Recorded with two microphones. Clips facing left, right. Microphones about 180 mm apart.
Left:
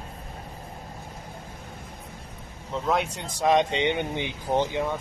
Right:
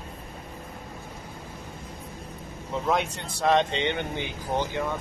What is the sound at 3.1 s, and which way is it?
Speech, 15° left (ahead or behind).